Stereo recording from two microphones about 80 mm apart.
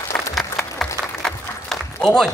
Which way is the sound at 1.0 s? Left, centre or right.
Centre.